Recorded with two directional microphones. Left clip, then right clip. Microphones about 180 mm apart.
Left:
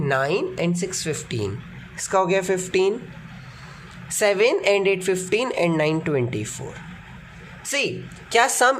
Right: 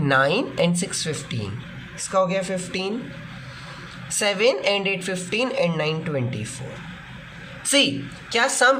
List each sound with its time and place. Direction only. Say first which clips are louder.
0.0 s a woman's voice: right 2 dB; 20° left (ahead or behind); by 2.9 s 35° left (ahead or behind)
4.2 s a woman's voice: left 2 dB; 30° left (ahead or behind)
7.7 s speech: right 5 dB; 25° left (ahead or behind)
8.3 s a woman's voice: left 1 dB; 45° left (ahead or behind)